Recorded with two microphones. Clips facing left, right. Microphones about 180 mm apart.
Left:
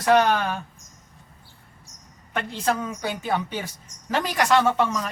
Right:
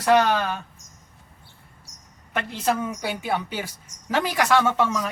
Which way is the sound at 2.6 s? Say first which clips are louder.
Right 1 dB; 10° right (ahead or behind).